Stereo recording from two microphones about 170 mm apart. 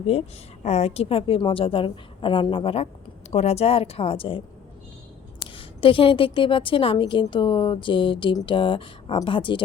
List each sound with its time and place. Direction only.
0.1 s a woman's voice: 40° left (ahead or behind)
5.5 s a woman's voice: 30° left (ahead or behind)